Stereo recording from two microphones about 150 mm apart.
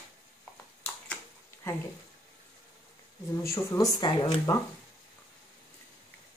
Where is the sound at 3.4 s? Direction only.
20° left (ahead or behind).